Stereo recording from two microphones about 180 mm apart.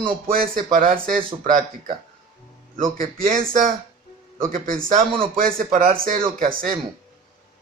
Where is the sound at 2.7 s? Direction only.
45° right (ahead or behind).